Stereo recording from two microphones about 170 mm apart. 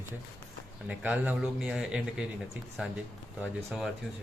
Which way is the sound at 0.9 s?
10° right (ahead or behind).